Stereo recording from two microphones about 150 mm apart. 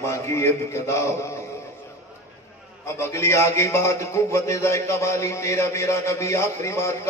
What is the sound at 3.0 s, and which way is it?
A man's voice, 20° left (ahead or behind).